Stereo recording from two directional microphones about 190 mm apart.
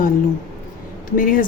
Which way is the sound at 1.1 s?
45° left (ahead or behind).